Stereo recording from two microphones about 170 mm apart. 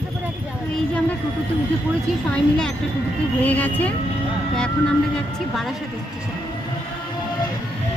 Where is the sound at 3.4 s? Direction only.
10° left (ahead or behind).